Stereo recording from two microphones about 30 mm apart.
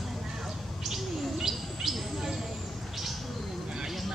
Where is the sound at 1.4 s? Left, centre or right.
Centre.